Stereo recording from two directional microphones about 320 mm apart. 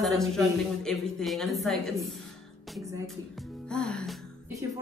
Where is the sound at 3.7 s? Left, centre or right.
Centre.